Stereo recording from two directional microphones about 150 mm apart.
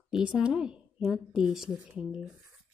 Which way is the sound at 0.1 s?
5° right (ahead or behind).